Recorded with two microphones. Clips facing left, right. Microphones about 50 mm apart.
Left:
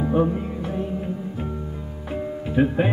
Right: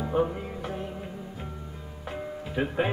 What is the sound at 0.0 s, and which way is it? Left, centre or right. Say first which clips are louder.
Music: left 5 dB; centre.